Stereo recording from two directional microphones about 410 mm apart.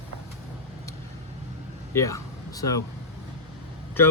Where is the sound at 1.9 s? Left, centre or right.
Centre.